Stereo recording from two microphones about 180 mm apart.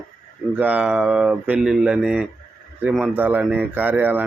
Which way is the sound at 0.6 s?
10° right (ahead or behind).